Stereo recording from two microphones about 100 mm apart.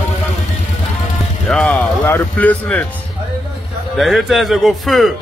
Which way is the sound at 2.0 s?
15° left (ahead or behind).